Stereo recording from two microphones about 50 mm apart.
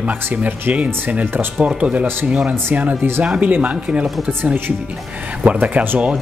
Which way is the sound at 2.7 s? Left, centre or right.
Right.